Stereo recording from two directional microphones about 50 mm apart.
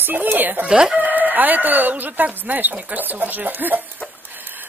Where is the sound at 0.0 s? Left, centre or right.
Right.